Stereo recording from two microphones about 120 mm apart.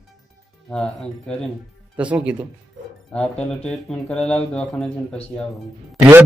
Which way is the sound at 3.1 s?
10° left (ahead or behind).